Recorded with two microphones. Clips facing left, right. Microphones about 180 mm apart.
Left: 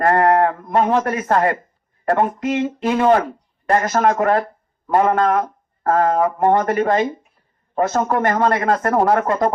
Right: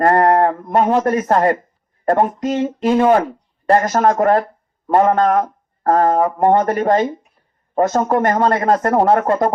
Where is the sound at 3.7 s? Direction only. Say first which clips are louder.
Right 3 dB; 35° right (ahead or behind).